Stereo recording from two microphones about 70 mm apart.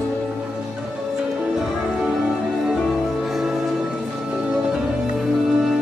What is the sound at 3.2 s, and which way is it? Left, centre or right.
Music, centre.